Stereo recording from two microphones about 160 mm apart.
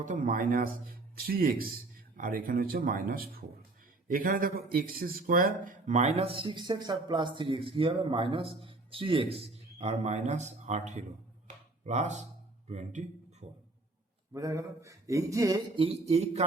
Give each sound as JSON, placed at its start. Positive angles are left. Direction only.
{"t": 0.0, "sound": "speech", "side_deg": -55}
{"t": 11.4, "sound": "a sound", "side_deg": -45}
{"t": 12.6, "sound": "a man's voice", "side_deg": -45}
{"t": 14.3, "sound": "speech", "side_deg": -20}
{"t": 15.7, "sound": "speech", "side_deg": -35}